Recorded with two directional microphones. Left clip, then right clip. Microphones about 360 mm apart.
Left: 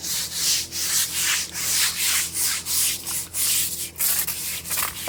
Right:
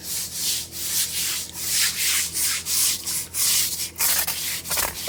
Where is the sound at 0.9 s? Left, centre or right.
Centre.